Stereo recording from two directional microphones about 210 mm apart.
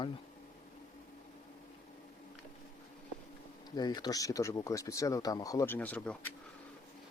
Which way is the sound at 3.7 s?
20° left (ahead or behind).